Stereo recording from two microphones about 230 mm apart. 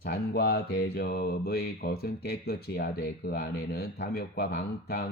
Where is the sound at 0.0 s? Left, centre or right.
Left.